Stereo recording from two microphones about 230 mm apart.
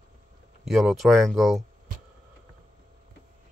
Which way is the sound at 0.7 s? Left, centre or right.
Centre.